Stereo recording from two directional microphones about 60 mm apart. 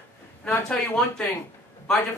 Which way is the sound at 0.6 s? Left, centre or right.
Centre.